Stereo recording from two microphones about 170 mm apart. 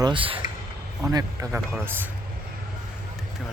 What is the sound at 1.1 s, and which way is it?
Speech, 20° right (ahead or behind).